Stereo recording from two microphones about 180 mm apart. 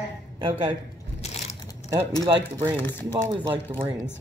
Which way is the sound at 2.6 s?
10° left (ahead or behind).